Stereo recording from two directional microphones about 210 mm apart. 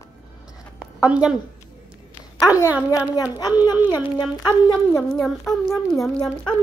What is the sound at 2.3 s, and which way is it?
A woman's voice, 15° left (ahead or behind).